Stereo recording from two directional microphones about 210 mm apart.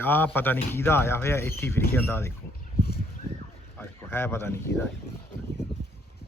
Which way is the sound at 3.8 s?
10° left (ahead or behind).